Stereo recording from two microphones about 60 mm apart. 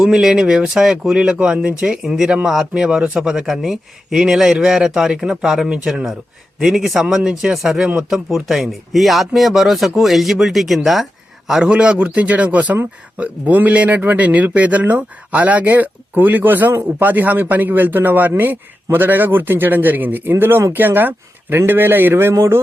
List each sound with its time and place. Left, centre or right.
0.0 s speech: centre
10.8 s a sound: centre
11.6 s a man's voice: centre; by 22.6 s right